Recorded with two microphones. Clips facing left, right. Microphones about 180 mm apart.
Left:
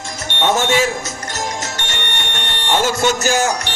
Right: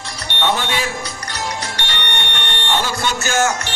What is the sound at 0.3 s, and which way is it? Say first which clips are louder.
Music: left 4 dB; 45° left (ahead or behind).